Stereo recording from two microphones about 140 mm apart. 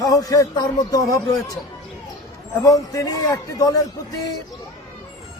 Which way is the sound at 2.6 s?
25° left (ahead or behind).